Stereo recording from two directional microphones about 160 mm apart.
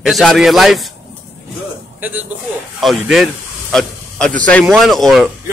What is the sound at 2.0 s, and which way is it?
Speech, 10° right (ahead or behind).